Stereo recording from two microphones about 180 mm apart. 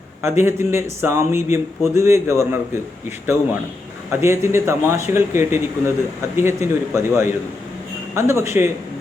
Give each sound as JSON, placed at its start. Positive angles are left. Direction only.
{"t": 0.2, "sound": "speech", "side_deg": -15}
{"t": 4.1, "sound": "speech", "side_deg": -15}